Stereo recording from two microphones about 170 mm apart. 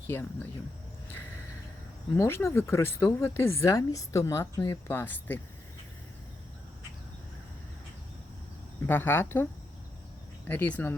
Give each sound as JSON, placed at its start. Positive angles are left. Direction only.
{"t": 0.1, "sound": "speech", "side_deg": 15}
{"t": 2.1, "sound": "speech", "side_deg": 15}
{"t": 8.9, "sound": "speech", "side_deg": 10}
{"t": 10.5, "sound": "speech", "side_deg": 10}